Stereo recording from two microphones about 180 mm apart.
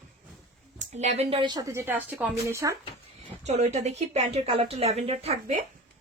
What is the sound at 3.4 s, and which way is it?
Speech, 40° right (ahead or behind).